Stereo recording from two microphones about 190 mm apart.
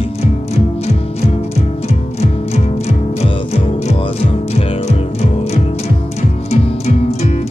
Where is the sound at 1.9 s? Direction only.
35° left (ahead or behind).